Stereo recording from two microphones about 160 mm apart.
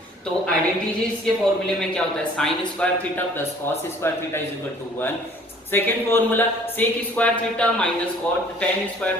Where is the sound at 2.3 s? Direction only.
5° left (ahead or behind).